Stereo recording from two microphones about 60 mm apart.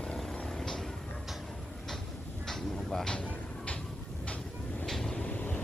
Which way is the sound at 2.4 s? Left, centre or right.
Centre.